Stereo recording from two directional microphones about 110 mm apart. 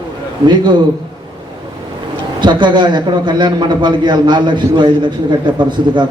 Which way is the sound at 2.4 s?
45° right (ahead or behind).